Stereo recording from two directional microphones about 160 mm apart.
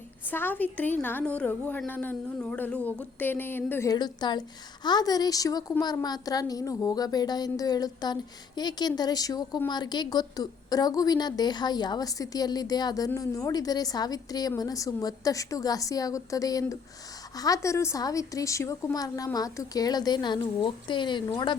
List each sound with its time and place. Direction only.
0.3 s a woman's voice: 10° left (ahead or behind); by 21.5 s 30° left (ahead or behind)